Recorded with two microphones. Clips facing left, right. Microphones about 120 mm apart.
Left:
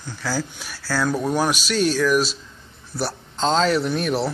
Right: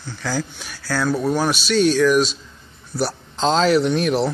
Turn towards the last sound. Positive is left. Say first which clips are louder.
# right 4 dB
turn(degrees=0)  # may be behind; listen again after turning